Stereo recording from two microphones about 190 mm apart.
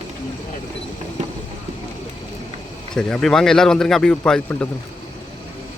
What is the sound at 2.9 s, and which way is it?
Speech, 5° left (ahead or behind).